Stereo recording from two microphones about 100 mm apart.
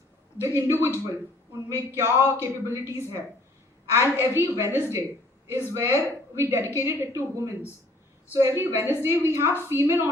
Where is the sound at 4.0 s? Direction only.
25° right (ahead or behind).